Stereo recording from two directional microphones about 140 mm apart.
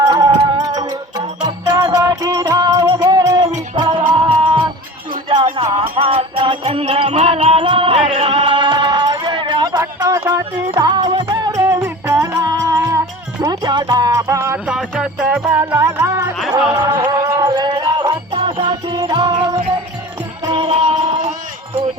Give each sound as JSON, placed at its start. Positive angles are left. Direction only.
{"t": 0.0, "sound": "music", "side_deg": -30}
{"t": 5.7, "sound": "music", "side_deg": -35}
{"t": 9.8, "sound": "music", "side_deg": -20}
{"t": 10.8, "sound": "music", "side_deg": -30}
{"t": 14.7, "sound": "music", "side_deg": -5}
{"t": 17.5, "sound": "music", "side_deg": -35}